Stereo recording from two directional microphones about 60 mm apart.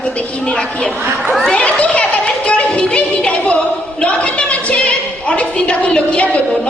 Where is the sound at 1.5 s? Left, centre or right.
Left.